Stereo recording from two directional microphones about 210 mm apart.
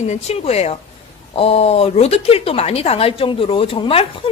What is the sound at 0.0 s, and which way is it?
A woman's voice, 30° left (ahead or behind).